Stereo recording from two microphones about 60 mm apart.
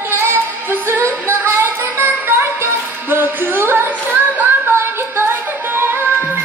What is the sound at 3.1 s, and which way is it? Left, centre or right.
Music, right.